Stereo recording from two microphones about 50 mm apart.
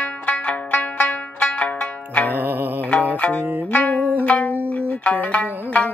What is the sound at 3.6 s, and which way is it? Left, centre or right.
Music, left.